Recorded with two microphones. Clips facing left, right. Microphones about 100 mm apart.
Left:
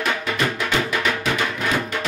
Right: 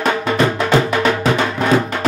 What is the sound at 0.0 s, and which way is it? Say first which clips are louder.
Music: right 7 dB; 35° right (ahead or behind).